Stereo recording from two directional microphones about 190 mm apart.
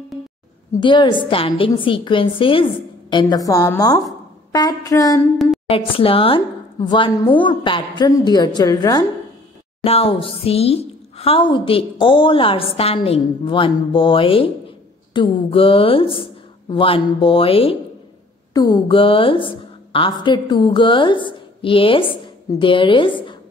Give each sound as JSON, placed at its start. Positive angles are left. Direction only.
{"t": 0.7, "sound": "a woman's voice", "side_deg": 25}
{"t": 5.7, "sound": "a woman's voice", "side_deg": 30}
{"t": 9.8, "sound": "a woman's voice", "side_deg": 30}